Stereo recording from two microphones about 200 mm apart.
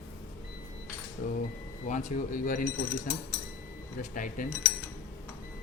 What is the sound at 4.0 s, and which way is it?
Speech, 40° left (ahead or behind).